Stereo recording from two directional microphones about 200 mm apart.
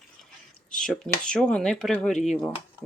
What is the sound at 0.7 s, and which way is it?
Speech, 5° left (ahead or behind).